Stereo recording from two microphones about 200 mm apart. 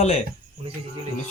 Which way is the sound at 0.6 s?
30° right (ahead or behind).